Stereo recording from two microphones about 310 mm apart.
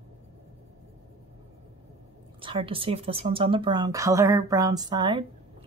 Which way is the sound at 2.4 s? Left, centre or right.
Centre.